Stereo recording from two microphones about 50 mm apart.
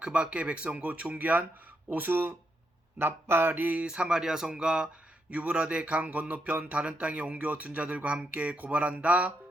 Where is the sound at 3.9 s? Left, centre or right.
Centre.